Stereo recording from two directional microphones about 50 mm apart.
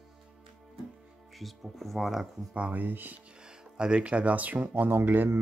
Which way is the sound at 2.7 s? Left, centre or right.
Right.